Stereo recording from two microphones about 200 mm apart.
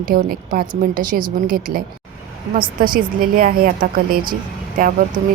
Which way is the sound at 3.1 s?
45° right (ahead or behind).